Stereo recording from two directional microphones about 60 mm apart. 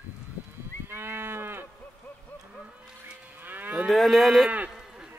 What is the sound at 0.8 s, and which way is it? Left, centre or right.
Moo, right.